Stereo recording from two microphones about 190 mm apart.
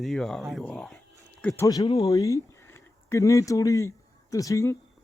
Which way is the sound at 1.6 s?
20° left (ahead or behind).